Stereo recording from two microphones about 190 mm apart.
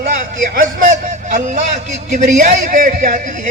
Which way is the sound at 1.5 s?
40° right (ahead or behind).